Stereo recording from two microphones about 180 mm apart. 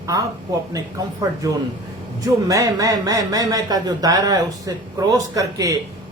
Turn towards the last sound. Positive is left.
turn(degrees=-20)  # may be behind; listen again after turning